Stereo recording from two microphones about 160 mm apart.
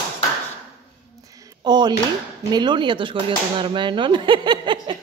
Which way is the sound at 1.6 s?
25° right (ahead or behind).